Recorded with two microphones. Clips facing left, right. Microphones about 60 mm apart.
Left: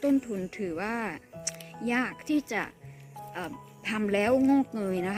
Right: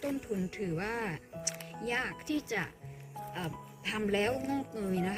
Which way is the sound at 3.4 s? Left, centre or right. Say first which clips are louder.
Left 3 dB; left.